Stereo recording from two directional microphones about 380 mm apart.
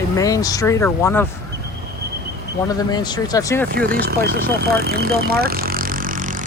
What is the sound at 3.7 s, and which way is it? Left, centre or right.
Vehicle, right.